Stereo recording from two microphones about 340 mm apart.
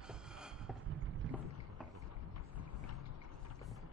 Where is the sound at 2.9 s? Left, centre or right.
Left.